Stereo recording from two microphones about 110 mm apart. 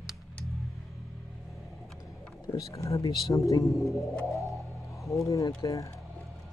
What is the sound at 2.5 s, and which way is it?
Speech, 30° left (ahead or behind).